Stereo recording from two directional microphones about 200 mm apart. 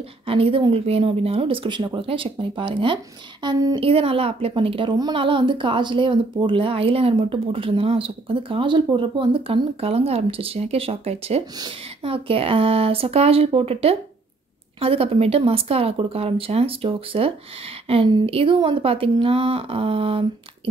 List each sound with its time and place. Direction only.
0.3 s a woman's voice: 30° right (ahead or behind)